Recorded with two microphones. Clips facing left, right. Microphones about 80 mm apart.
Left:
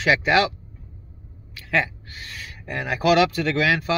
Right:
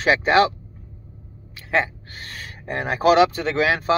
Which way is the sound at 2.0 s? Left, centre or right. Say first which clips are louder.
Right 1 dB; right.